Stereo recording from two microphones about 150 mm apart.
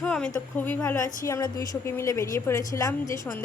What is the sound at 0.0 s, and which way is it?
A woman's voice, 5° left (ahead or behind).